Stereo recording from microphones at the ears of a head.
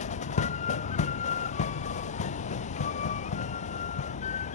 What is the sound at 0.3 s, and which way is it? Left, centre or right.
Vehicle, left.